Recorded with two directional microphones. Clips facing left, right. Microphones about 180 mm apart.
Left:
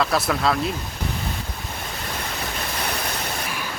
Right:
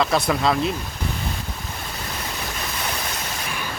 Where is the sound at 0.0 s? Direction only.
Centre (ahead or behind).